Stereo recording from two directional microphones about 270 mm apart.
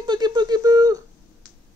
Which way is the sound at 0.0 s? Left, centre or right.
Centre.